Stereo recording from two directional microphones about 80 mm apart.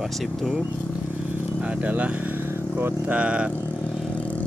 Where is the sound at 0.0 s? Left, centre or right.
Centre.